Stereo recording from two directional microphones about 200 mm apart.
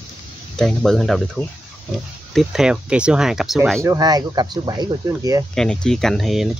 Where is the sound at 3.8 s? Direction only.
20° right (ahead or behind).